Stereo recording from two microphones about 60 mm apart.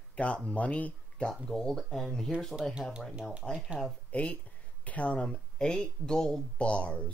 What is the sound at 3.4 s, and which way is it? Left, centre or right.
Speech, centre.